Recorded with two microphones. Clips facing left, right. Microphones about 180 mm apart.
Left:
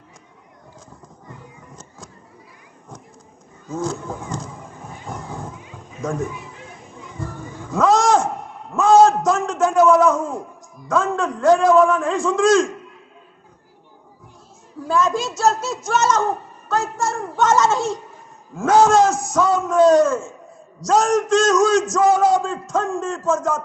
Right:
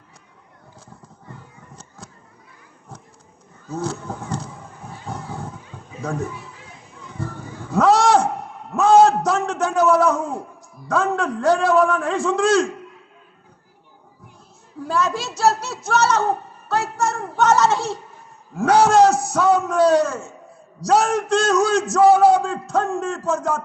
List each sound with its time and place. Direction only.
3.8 s a man's voice: 50° left (ahead or behind)
5.0 s a sound: 45° left (ahead or behind)
6.0 s speech: 45° left (ahead or behind)
7.2 s a sound: 45° left (ahead or behind)
11.2 s a man's voice: 45° left (ahead or behind)
14.9 s a child's voice: 45° left (ahead or behind)